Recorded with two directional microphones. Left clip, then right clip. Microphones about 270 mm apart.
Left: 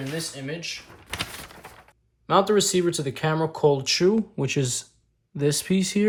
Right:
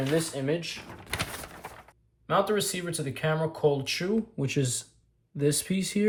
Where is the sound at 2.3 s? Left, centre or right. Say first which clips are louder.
Left 6 dB; centre.